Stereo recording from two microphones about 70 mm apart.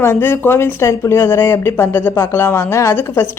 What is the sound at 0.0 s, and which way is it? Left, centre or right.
A woman's voice, left.